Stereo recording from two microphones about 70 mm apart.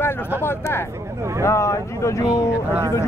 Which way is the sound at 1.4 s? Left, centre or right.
Left.